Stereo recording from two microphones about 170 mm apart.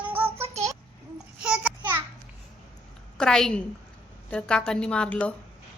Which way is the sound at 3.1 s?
5° left (ahead or behind).